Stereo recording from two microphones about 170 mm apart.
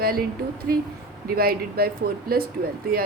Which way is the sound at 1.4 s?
65° right (ahead or behind).